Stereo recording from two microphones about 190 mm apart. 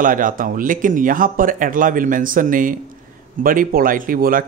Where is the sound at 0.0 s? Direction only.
45° right (ahead or behind).